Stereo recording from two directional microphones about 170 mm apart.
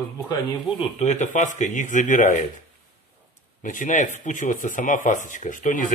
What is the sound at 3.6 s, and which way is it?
Speech, 45° left (ahead or behind).